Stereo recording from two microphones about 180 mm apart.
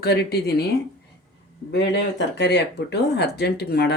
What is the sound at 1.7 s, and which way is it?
Speech, 75° left (ahead or behind).